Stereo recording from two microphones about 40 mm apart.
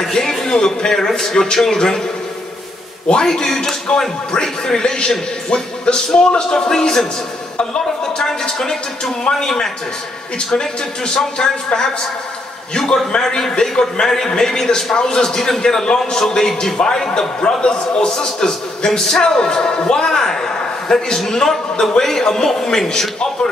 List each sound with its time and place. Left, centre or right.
0.0 s a man's voice: centre
3.3 s a man's voice: centre